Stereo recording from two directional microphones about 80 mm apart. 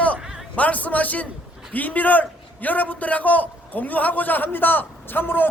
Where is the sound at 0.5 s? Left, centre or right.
Centre.